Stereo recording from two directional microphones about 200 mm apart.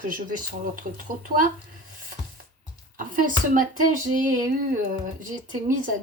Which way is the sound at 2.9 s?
40° right (ahead or behind).